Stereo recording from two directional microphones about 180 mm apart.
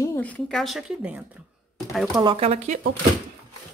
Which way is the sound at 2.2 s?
35° right (ahead or behind).